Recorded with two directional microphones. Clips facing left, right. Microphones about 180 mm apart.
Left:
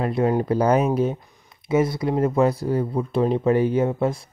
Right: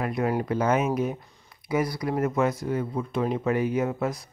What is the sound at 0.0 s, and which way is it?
Speech, 30° left (ahead or behind).